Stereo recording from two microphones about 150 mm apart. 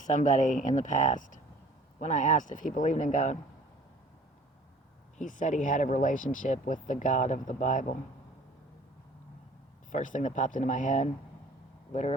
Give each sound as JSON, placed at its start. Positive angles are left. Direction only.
{"t": 0.0, "sound": "speech", "side_deg": 55}
{"t": 5.1, "sound": "speech", "side_deg": 60}
{"t": 9.9, "sound": "speech", "side_deg": 60}